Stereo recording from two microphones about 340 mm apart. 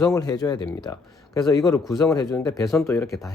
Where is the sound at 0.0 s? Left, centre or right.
Centre.